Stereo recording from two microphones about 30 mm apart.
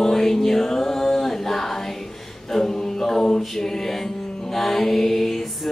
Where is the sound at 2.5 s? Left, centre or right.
Centre.